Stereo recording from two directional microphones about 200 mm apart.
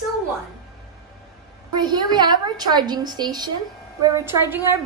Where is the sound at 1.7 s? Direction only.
20° right (ahead or behind).